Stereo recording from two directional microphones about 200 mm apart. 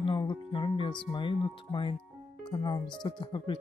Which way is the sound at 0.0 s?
25° left (ahead or behind).